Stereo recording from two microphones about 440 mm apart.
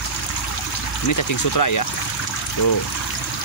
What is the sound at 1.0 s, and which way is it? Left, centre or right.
Speech, left.